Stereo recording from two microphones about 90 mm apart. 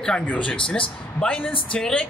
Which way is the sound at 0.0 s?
10° left (ahead or behind).